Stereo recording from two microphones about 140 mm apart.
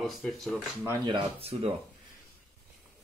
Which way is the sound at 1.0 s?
40° right (ahead or behind).